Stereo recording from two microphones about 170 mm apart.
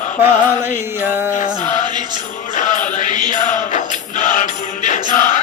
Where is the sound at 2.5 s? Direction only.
45° left (ahead or behind).